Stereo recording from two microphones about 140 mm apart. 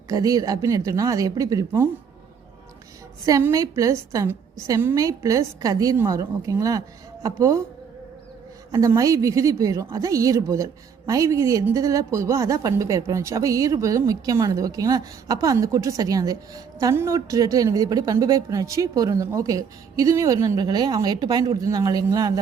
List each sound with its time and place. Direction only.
0.1 s a woman's voice: 25° right (ahead or behind)
3.2 s a woman's voice: 25° right (ahead or behind)
8.7 s a woman's voice: 25° right (ahead or behind)